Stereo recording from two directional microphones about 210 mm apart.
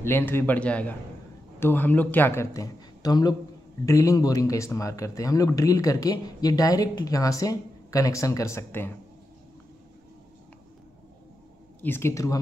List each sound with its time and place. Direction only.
0.0 s speech: 10° left (ahead or behind)
11.8 s speech: 10° left (ahead or behind)